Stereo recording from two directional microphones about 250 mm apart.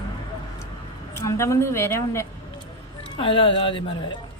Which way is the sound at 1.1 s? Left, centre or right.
Centre.